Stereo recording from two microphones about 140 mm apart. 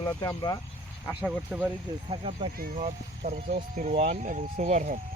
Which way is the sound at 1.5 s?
5° right (ahead or behind).